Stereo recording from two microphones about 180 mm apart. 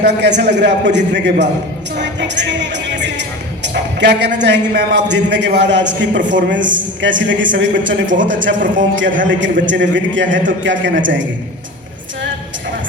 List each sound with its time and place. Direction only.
0.0 s a man's voice: 70° right (ahead or behind); by 11.3 s 90° right